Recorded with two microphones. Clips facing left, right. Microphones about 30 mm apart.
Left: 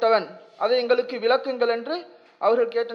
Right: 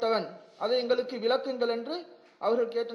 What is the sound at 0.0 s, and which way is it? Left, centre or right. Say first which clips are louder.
A man's voice: left 8 dB; left.